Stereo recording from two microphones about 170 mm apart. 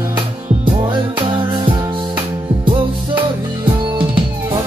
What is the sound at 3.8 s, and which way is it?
Music, 30° right (ahead or behind).